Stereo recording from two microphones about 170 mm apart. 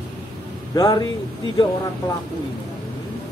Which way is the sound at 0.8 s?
25° left (ahead or behind).